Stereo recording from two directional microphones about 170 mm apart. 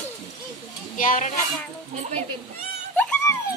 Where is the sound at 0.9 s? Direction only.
50° left (ahead or behind).